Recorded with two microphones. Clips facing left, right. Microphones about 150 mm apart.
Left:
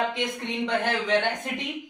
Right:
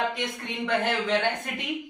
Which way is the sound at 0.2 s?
15° left (ahead or behind).